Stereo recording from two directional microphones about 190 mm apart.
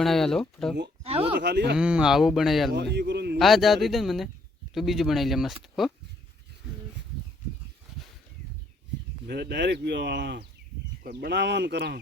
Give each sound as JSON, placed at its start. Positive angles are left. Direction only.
{"t": 0.0, "sound": "speech", "side_deg": 0}
{"t": 1.0, "sound": "speech", "side_deg": -30}
{"t": 1.4, "sound": "speech", "side_deg": -60}
{"t": 1.7, "sound": "speech", "side_deg": -5}
{"t": 2.7, "sound": "speech", "side_deg": -60}
{"t": 3.3, "sound": "speech", "side_deg": 0}
{"t": 9.2, "sound": "speech", "side_deg": -60}